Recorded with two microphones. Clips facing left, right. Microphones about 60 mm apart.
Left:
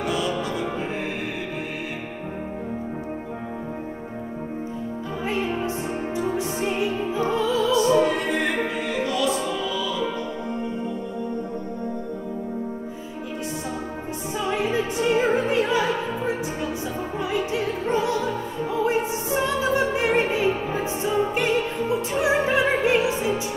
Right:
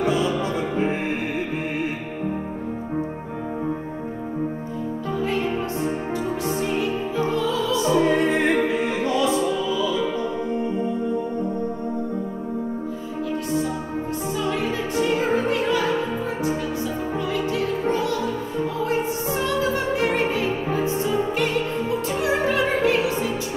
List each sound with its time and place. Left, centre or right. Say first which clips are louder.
0.0 s music: right 3 dB; right
6.6 s music: even; centre
7.8 s music: right 1 dB; right
14.4 s music: left 3 dB; centre
15.2 s opera: even; left
18.9 s music: even; left